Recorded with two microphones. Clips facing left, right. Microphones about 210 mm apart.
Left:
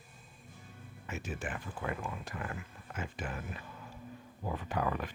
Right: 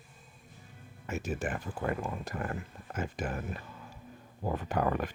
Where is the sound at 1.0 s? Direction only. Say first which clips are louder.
Right 6 dB; 45° right (ahead or behind).